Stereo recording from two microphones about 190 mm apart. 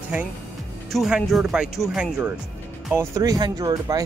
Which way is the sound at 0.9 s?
Centre (ahead or behind).